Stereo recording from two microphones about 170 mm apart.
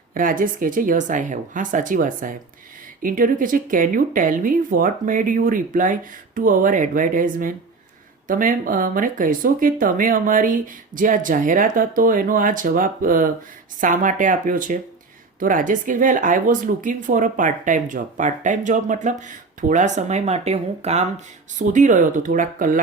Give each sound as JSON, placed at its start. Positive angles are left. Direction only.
{"t": 0.1, "sound": "speech", "side_deg": -55}